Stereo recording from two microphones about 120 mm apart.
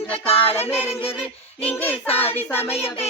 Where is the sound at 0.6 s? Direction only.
20° left (ahead or behind).